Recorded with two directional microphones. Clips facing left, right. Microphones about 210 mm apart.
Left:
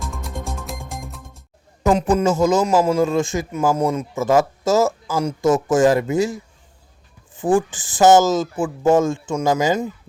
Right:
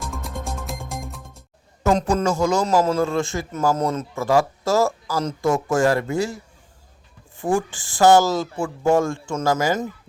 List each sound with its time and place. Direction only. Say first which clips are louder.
0.0 s music: left 1 dB; centre (ahead or behind)
1.9 s a man's voice: left 3 dB; 5° left (ahead or behind)
2.2 s a man's voice: left 3 dB; 20° left (ahead or behind)
7.7 s a man's voice: even; 20° left (ahead or behind)